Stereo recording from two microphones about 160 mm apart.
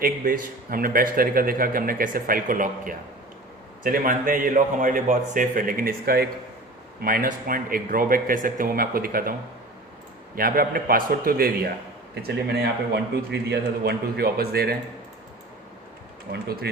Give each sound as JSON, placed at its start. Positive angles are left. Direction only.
{"t": 0.0, "sound": "a man's voice", "side_deg": -60}
{"t": 10.3, "sound": "a man's voice", "side_deg": -65}
{"t": 12.1, "sound": "a man's voice", "side_deg": -90}